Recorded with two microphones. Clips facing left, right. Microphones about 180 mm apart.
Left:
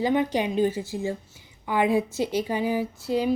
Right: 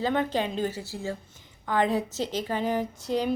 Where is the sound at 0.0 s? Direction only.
15° left (ahead or behind).